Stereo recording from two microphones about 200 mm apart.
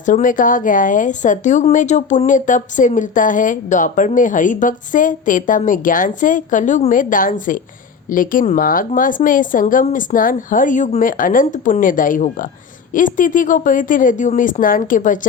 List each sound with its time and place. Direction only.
0.0 s speech: 40° left (ahead or behind)